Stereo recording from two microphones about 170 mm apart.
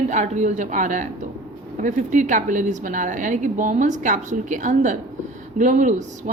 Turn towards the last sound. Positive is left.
turn(degrees=-45)  # may be behind; listen again after turning